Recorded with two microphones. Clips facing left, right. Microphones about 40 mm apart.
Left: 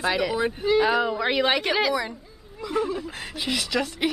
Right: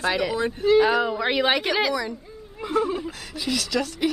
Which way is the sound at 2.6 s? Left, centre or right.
Right.